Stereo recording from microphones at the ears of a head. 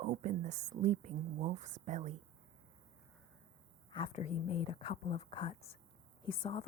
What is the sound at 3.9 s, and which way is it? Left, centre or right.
Speech, left.